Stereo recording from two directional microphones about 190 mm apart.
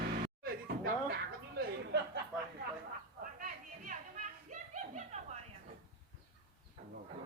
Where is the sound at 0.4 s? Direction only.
55° right (ahead or behind).